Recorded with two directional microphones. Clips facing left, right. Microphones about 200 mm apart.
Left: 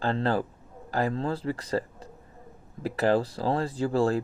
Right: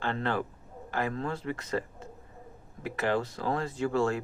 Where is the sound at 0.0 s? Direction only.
35° left (ahead or behind).